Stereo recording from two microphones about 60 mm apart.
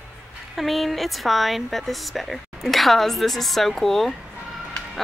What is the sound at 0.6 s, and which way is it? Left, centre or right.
Speech, centre.